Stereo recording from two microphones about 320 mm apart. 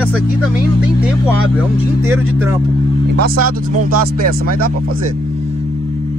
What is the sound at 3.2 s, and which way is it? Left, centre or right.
Speech, right.